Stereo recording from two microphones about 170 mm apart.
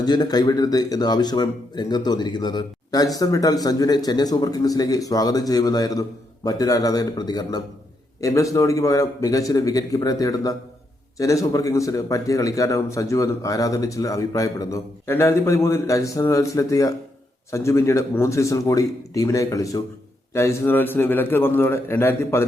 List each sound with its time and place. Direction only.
0.0 s a man's voice: 25° left (ahead or behind)